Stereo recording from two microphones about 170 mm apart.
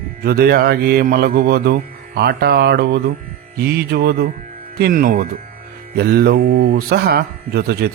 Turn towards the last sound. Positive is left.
turn(degrees=-70)  # may be behind; listen again after turning